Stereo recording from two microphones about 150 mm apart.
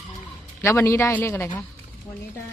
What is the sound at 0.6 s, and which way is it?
A man's voice, 20° left (ahead or behind).